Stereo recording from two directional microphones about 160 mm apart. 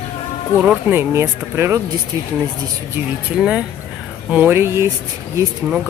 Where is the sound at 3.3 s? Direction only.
5° right (ahead or behind).